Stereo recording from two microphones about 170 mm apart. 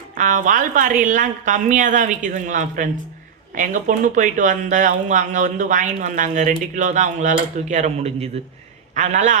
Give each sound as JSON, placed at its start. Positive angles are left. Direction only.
{"t": 0.2, "sound": "speech", "side_deg": -50}